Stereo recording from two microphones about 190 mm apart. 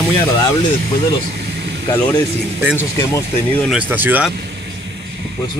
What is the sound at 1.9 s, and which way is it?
Speech, 20° left (ahead or behind).